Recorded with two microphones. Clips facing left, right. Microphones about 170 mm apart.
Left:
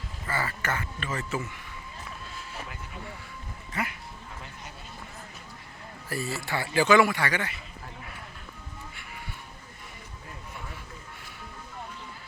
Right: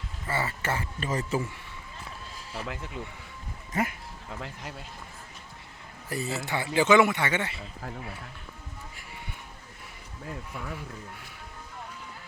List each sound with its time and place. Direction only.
0.3 s speech: 25° right (ahead or behind)
3.7 s speech: 45° right (ahead or behind)
6.1 s a man's voice: 20° right (ahead or behind)